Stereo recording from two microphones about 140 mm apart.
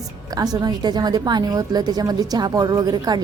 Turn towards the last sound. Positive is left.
turn(degrees=-30)  # may be behind; listen again after turning